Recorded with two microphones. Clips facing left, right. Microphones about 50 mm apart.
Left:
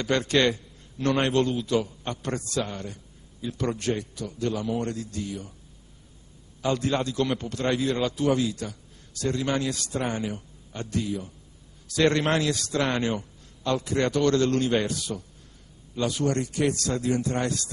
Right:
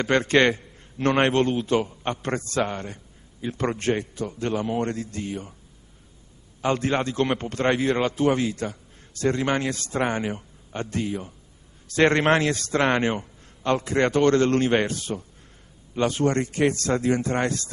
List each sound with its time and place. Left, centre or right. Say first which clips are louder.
0.0 s a man's voice: right 4 dB; right
6.6 s a man's voice: right 2 dB; right